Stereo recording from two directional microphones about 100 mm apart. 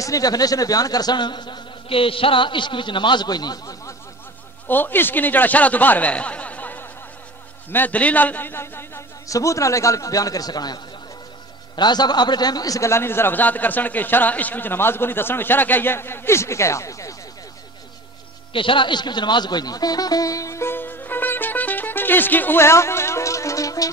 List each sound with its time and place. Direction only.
0.0 s speech: 35° left (ahead or behind)
4.6 s a man's voice: 20° left (ahead or behind)
18.5 s music: 60° left (ahead or behind); by 23.9 s 35° left (ahead or behind)